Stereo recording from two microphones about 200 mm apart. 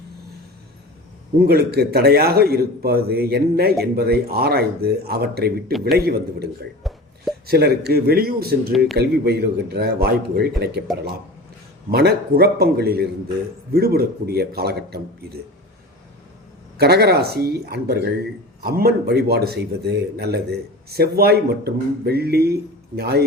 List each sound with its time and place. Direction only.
1.4 s speech: 50° right (ahead or behind)
6.8 s a sound: centre (ahead or behind)
7.4 s speech: 50° right (ahead or behind)
11.9 s speech: 55° right (ahead or behind)
16.7 s speech: 55° right (ahead or behind)